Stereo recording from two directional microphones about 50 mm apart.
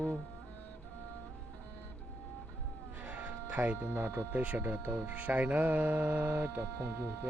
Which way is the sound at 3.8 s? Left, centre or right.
Right.